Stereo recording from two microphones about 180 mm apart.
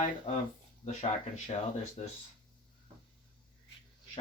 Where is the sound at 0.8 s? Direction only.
40° left (ahead or behind).